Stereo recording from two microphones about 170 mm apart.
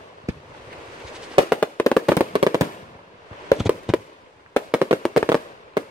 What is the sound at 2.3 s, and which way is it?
Fireworks, 25° right (ahead or behind).